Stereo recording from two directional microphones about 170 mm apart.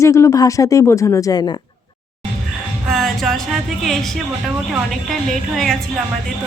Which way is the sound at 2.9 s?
Centre (ahead or behind).